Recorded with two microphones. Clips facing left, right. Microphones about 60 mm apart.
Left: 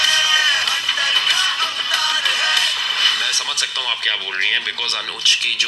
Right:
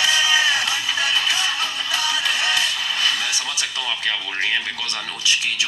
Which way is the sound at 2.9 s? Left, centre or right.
Left.